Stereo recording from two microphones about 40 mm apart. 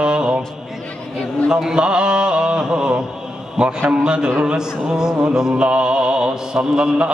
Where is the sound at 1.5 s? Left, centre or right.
Centre.